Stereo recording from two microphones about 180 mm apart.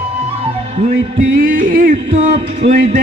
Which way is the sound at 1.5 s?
50° right (ahead or behind).